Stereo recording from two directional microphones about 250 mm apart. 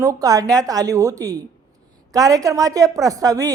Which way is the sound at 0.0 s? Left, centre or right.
Centre.